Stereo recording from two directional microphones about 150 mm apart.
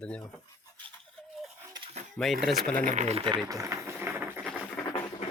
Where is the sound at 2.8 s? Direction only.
50° right (ahead or behind).